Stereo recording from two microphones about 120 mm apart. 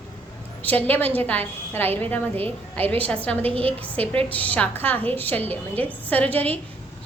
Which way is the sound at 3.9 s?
10° left (ahead or behind).